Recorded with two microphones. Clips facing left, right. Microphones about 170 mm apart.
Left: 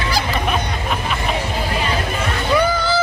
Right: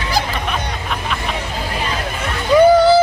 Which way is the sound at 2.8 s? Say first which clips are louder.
Right 9 dB; 65° right (ahead or behind).